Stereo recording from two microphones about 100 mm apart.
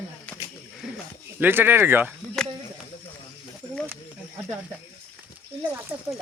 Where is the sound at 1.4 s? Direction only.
20° right (ahead or behind).